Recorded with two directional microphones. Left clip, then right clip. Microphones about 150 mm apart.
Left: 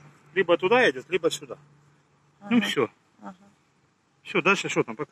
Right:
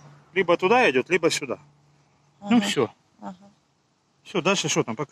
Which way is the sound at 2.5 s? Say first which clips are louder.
Right 2 dB; 45° right (ahead or behind).